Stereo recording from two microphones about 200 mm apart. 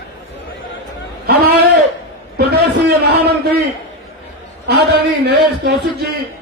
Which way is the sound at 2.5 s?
55° right (ahead or behind).